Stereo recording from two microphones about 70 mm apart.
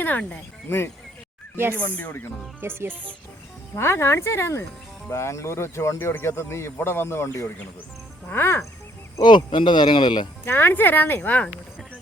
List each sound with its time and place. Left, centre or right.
0.0 s speech: left
0.7 s speech: left
1.5 s speech: right
3.8 s speech: left
8.3 s speech: left
9.2 s speech: left
10.4 s speech: left